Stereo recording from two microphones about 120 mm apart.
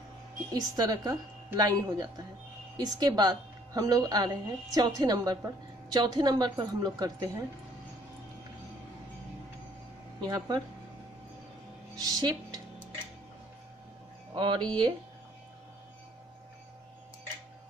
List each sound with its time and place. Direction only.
0.5 s a woman's voice: 30° right (ahead or behind)
10.2 s a woman's voice: 35° right (ahead or behind)
11.9 s speech: 30° right (ahead or behind)
14.3 s speech: 45° right (ahead or behind)